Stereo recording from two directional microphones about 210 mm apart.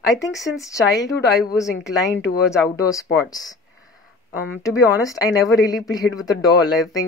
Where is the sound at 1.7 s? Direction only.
55° left (ahead or behind).